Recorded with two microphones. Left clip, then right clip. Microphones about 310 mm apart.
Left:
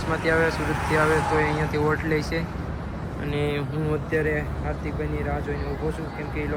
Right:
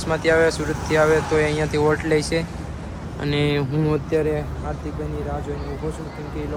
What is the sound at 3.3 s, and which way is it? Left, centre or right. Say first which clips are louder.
Speech: right 5 dB; right.